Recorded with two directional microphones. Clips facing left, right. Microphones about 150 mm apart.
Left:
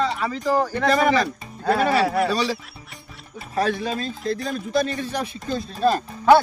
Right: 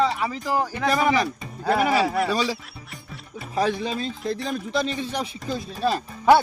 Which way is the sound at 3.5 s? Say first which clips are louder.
Left 1 dB; 15° right (ahead or behind).